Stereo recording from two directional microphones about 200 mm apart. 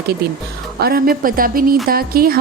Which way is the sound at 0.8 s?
50° right (ahead or behind).